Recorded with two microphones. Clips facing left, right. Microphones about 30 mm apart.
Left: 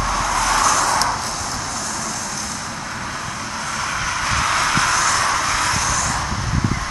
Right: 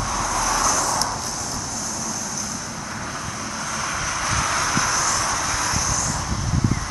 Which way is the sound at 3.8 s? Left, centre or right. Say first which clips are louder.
Left 3 dB; left.